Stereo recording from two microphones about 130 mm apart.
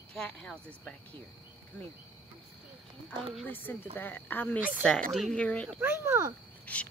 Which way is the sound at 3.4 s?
15° left (ahead or behind).